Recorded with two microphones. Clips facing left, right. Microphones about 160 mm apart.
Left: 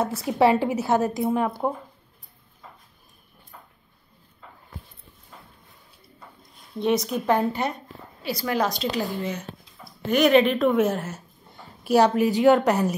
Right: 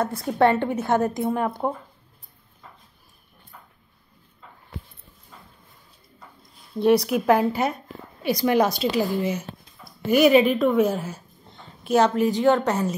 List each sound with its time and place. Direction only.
0.2 s a woman's voice: 5° left (ahead or behind)
6.8 s a woman's voice: 5° right (ahead or behind); by 12.9 s 15° left (ahead or behind)